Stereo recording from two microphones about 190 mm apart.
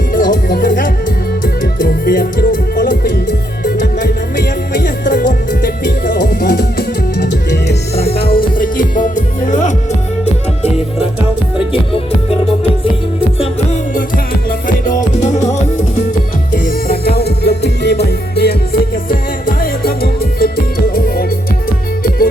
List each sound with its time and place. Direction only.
0.1 s music: 45° left (ahead or behind)
11.7 s music: 30° left (ahead or behind)
14.8 s music: 40° left (ahead or behind)
16.5 s music: 50° left (ahead or behind)